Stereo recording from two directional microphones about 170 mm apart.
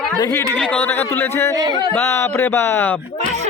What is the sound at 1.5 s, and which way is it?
Speech, 20° right (ahead or behind).